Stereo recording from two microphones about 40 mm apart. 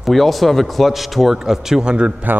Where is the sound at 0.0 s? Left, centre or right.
Centre.